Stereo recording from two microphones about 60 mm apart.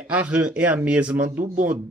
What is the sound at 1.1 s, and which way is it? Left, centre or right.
Speech, right.